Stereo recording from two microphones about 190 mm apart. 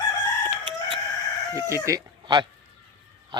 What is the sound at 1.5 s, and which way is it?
Speech, 15° right (ahead or behind).